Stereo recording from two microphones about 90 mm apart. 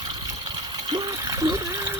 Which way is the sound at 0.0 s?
55° right (ahead or behind).